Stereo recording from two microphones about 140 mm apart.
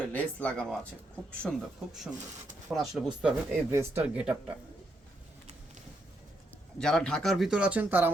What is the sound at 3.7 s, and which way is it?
Speech, 20° right (ahead or behind).